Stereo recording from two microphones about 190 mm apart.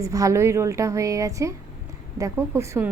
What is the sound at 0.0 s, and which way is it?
Speech, 15° right (ahead or behind).